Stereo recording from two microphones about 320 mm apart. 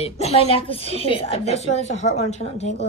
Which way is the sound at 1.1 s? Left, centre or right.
Centre.